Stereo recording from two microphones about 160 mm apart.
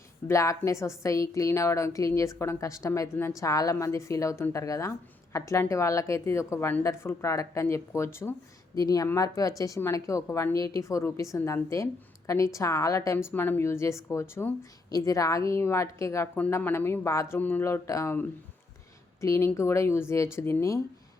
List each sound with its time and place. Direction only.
0.3 s a woman's voice: 20° left (ahead or behind)